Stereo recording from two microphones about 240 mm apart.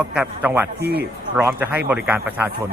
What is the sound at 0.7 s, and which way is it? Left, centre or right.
Speech, right.